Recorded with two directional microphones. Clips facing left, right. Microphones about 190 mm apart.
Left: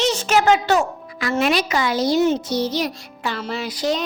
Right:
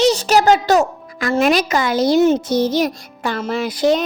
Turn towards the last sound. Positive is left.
turn(degrees=-55)  # may be behind; listen again after turning